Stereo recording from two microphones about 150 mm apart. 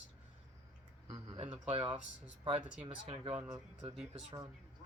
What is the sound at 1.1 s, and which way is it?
Speech, 40° right (ahead or behind).